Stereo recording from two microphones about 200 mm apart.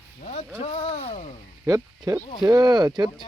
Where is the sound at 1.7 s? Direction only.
15° right (ahead or behind).